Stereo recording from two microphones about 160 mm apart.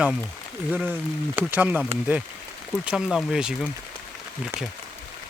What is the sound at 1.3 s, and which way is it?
Speech, 10° right (ahead or behind).